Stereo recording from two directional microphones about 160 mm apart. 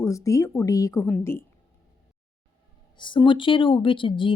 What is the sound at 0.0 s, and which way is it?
A woman's voice, 20° left (ahead or behind).